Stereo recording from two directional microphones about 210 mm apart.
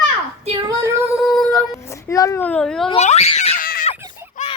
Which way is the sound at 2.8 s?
30° left (ahead or behind).